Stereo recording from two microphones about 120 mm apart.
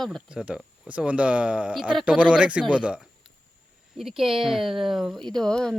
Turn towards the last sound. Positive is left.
turn(degrees=5)  # may be behind; listen again after turning